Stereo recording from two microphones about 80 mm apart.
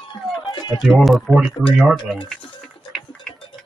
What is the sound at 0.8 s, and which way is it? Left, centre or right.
Speech, centre.